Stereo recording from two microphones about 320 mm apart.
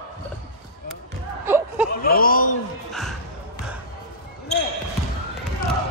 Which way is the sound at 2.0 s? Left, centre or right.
Left.